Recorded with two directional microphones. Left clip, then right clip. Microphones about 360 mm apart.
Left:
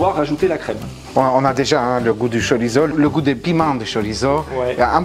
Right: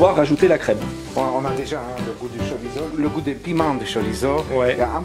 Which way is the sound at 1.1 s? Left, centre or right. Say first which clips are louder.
Left 7 dB; left.